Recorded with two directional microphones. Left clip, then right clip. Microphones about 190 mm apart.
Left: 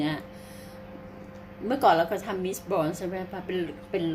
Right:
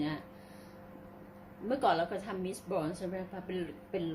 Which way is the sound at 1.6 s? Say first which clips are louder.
Left 8 dB; 15° left (ahead or behind).